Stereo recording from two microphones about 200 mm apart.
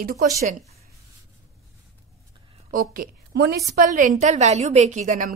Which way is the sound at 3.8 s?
40° right (ahead or behind).